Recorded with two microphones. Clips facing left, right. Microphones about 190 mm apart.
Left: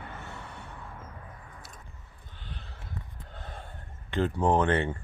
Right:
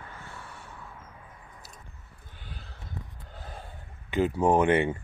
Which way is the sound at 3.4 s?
5° right (ahead or behind).